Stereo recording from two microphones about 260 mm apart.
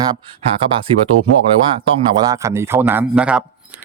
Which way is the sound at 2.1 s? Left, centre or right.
Centre.